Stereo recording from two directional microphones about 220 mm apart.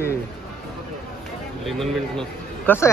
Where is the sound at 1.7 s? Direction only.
Centre (ahead or behind).